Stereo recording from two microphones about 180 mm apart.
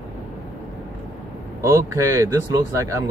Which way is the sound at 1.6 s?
15° right (ahead or behind).